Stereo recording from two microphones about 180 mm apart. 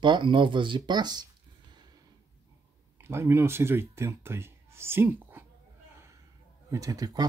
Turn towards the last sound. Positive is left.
turn(degrees=-20)  # may be behind; listen again after turning